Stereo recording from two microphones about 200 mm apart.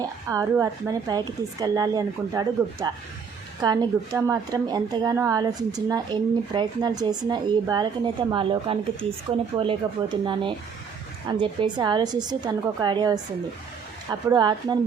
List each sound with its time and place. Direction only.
0.0 s a woman's voice: 15° right (ahead or behind)